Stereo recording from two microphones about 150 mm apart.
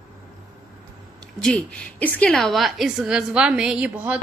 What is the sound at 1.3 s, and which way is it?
A woman's voice, 5° left (ahead or behind).